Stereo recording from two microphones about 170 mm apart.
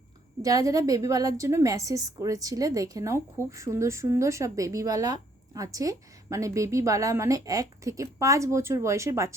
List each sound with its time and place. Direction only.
0.4 s a woman's voice: 20° right (ahead or behind)